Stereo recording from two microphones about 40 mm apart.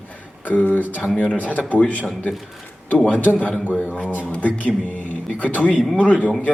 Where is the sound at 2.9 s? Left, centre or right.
Left.